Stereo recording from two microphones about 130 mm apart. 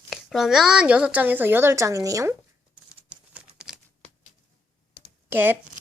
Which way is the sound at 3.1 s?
10° right (ahead or behind).